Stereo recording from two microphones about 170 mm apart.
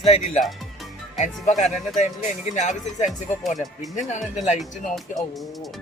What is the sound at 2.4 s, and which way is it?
Speech, 45° left (ahead or behind).